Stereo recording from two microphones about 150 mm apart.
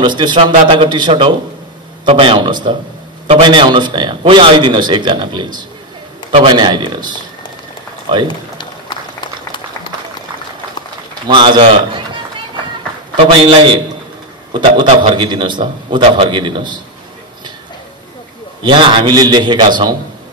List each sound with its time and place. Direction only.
0.0 s a man's voice: 30° right (ahead or behind)
8.3 s run: 30° left (ahead or behind)
11.2 s a man's voice: 30° right (ahead or behind)
13.1 s a man's voice: 30° right (ahead or behind)
18.6 s a man's voice: 30° right (ahead or behind)